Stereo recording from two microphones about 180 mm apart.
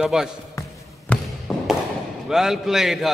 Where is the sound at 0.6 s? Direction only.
20° left (ahead or behind).